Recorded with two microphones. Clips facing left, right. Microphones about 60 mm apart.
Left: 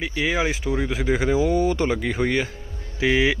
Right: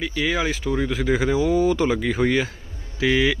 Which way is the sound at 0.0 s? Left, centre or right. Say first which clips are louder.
Even; centre.